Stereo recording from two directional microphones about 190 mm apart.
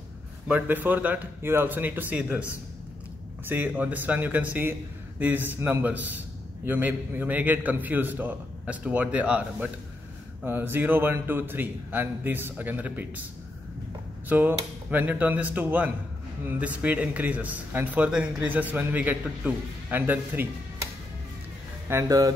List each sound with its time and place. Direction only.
0.5 s speech: 10° right (ahead or behind)
14.3 s speech: 10° right (ahead or behind)
21.8 s speech: 15° right (ahead or behind)